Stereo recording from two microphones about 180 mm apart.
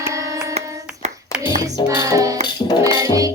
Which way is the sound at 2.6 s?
35° left (ahead or behind).